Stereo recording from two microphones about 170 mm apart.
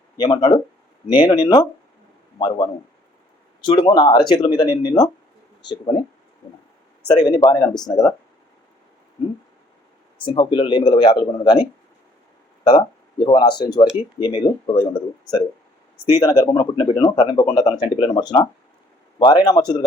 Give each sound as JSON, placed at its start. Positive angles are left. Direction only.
{"t": 0.2, "sound": "speech", "side_deg": 25}
{"t": 3.6, "sound": "speech", "side_deg": 25}
{"t": 7.1, "sound": "speech", "side_deg": 25}
{"t": 10.2, "sound": "speech", "side_deg": 30}
{"t": 12.6, "sound": "speech", "side_deg": 25}
{"t": 16.2, "sound": "speech", "side_deg": 20}